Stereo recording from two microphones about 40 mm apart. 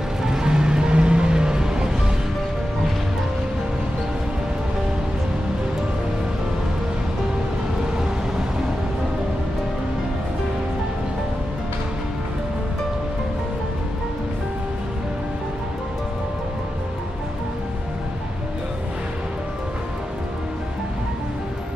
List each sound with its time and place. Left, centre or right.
0.2 s music: centre